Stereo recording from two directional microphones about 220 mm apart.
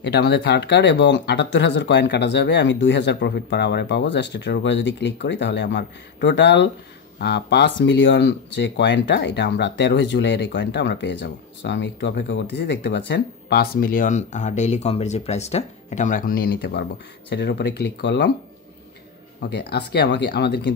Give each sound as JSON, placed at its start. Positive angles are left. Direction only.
{"t": 0.0, "sound": "speech", "side_deg": 50}
{"t": 19.5, "sound": "speech", "side_deg": 45}